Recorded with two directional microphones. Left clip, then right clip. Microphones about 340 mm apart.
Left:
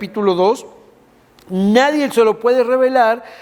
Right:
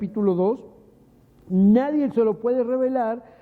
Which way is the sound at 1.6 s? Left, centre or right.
Centre.